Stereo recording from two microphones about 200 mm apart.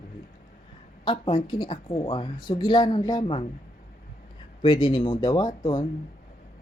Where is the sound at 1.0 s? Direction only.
25° left (ahead or behind).